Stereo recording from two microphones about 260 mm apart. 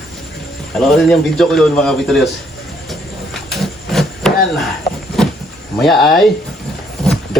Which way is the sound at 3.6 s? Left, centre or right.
Centre.